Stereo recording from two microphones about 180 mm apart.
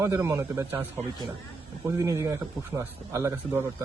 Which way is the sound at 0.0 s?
15° right (ahead or behind).